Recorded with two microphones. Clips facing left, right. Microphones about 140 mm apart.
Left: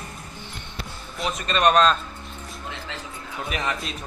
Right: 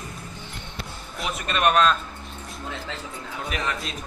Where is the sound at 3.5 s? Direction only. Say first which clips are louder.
Left 1 dB; 5° left (ahead or behind).